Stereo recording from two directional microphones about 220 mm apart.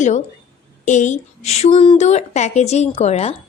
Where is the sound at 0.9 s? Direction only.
35° left (ahead or behind).